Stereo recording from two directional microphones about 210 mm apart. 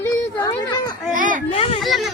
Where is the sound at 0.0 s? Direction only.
10° left (ahead or behind).